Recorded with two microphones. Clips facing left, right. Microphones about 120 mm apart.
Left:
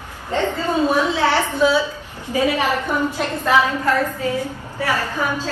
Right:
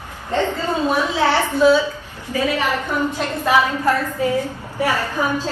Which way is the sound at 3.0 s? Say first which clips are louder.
Even; 15° right (ahead or behind).